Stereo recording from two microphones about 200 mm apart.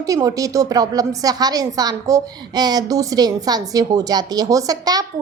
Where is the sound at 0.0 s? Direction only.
15° right (ahead or behind).